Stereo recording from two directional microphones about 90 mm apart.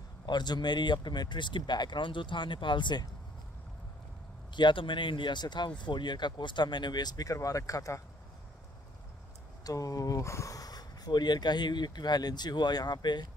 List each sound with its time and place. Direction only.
0.3 s speech: 55° left (ahead or behind)
4.6 s speech: 60° left (ahead or behind); by 8.0 s 40° left (ahead or behind)
9.7 s speech: 40° left (ahead or behind)